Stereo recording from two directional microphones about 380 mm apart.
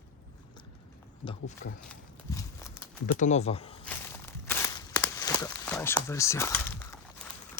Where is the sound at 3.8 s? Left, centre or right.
Centre.